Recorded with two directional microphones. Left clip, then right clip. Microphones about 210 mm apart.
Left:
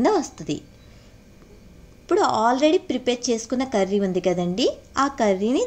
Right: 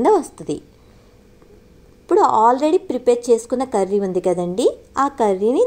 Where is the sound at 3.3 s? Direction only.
30° left (ahead or behind).